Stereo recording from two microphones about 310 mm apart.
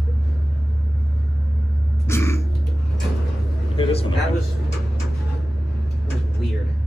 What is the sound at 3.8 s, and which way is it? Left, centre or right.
Speech, centre.